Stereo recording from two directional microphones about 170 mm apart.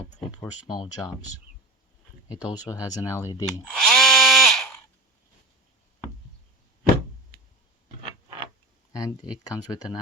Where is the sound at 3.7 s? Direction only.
Centre (ahead or behind).